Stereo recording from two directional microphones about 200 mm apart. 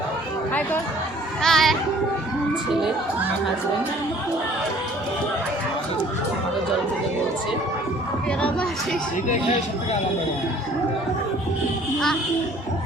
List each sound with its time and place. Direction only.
1.4 s speech: centre (ahead or behind)
8.4 s speech: 5° left (ahead or behind)
9.3 s speech: 30° left (ahead or behind)